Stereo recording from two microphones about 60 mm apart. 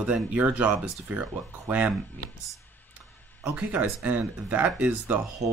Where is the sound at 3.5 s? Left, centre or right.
Right.